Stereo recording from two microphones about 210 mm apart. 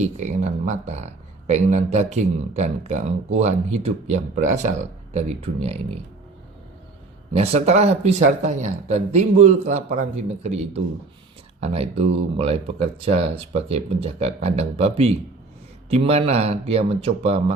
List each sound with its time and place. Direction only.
0.0 s speech: 35° right (ahead or behind)
7.3 s speech: 30° right (ahead or behind)